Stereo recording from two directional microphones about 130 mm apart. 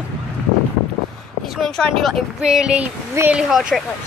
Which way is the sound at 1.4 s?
Centre (ahead or behind).